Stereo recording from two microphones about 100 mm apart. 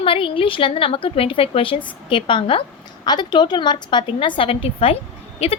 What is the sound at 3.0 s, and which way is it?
A woman's voice, 45° left (ahead or behind).